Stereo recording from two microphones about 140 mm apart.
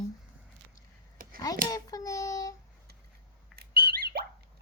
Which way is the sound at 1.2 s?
90° right.